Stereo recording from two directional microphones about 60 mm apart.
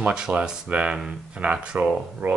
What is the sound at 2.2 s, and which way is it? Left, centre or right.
Speech, right.